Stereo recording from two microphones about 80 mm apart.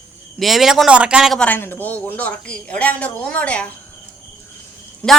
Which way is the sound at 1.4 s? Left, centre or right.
Left.